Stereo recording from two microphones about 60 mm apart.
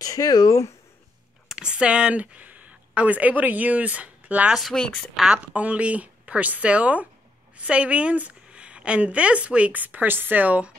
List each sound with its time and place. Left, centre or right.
0.0 s speech: left
1.5 s speech: centre
4.7 s a woman's voice: centre
5.1 s a woman's voice: centre
5.4 s a woman's voice: right